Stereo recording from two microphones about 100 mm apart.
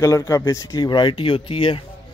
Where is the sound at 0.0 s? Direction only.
35° left (ahead or behind); by 1.8 s 60° left (ahead or behind).